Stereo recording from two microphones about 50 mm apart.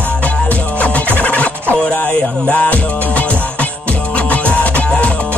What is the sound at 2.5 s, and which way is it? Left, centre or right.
Music, left.